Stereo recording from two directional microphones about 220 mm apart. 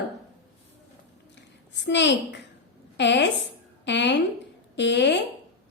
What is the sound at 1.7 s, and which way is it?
A woman's voice, 55° left (ahead or behind).